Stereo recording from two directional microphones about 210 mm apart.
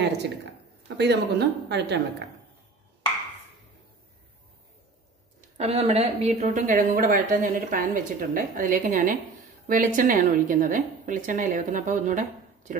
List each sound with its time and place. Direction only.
0.8 s speech: 55° right (ahead or behind)
5.6 s speech: 30° right (ahead or behind)